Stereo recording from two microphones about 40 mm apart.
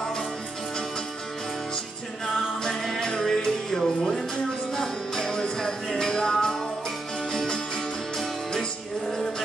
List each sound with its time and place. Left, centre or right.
2.6 s music: centre